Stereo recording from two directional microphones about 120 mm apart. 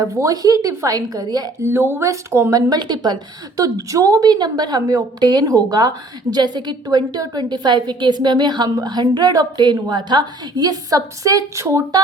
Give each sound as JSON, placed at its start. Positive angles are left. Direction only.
{"t": 0.0, "sound": "a woman's voice", "side_deg": -25}